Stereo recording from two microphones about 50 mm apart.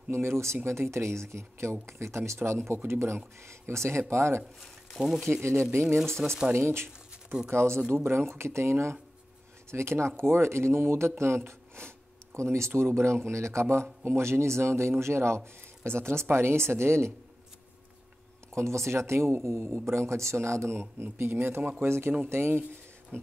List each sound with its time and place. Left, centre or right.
0.1 s a man's voice: right
4.6 s speech: centre
5.7 s speech: right
6.0 s speech: centre
6.5 s a sound: right
7.9 s a man's voice: right
12.4 s a man's voice: right
18.5 s a man's voice: right
20.7 s speech: right
21.8 s a man's voice: right